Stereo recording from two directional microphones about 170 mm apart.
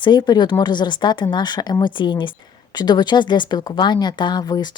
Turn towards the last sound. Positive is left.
turn(degrees=25)  # may be behind; listen again after turning